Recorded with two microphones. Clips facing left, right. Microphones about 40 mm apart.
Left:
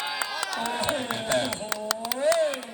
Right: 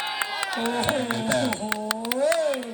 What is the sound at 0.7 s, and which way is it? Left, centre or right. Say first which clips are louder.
Speech: right 4 dB; right.